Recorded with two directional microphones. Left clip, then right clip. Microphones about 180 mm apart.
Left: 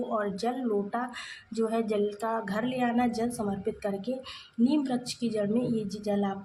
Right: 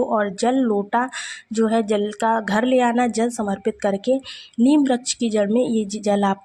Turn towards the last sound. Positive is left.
turn(degrees=-45)  # may be behind; listen again after turning